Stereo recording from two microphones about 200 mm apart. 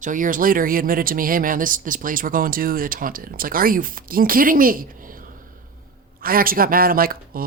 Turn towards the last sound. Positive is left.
turn(degrees=-45)  # may be behind; listen again after turning